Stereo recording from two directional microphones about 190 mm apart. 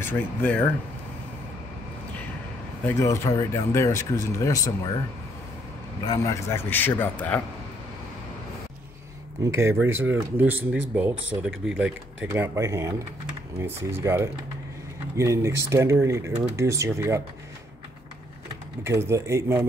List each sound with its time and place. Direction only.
0.0 s speech: 10° left (ahead or behind)
2.8 s speech: 15° left (ahead or behind)
6.0 s speech: 15° left (ahead or behind)
9.4 s speech: 15° right (ahead or behind)
18.9 s speech: 15° right (ahead or behind)